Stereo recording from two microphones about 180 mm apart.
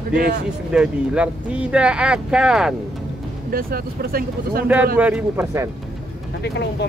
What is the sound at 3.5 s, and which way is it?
Speech, 55° right (ahead or behind).